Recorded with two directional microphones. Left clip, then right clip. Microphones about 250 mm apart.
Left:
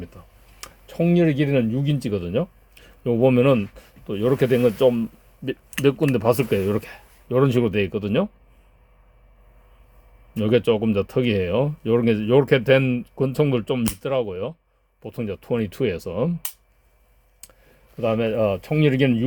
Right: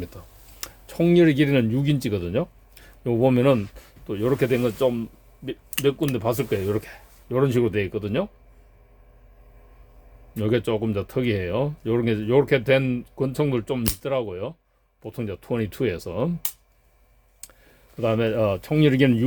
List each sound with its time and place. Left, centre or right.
0.6 s speech: centre
10.3 s speech: centre
17.4 s a sound: centre
17.9 s speech: centre